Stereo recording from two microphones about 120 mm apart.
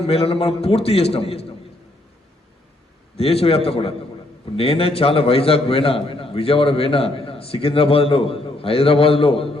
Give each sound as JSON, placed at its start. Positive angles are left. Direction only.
{"t": 0.0, "sound": "a man's voice", "side_deg": 55}
{"t": 3.2, "sound": "a man's voice", "side_deg": 55}